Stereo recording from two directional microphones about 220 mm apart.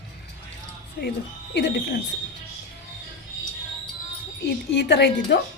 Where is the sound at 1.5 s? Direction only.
50° left (ahead or behind).